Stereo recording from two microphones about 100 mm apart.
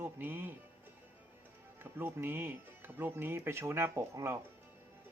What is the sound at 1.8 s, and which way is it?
Speech, 20° right (ahead or behind).